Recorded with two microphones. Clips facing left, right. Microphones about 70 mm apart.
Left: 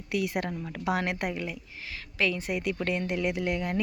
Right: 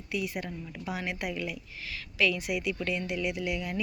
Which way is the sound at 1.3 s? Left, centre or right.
Left.